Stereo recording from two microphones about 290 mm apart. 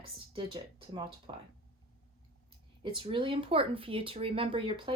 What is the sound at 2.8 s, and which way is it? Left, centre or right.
Speech, centre.